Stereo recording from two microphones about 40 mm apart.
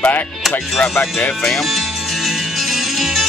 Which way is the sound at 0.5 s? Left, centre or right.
Left.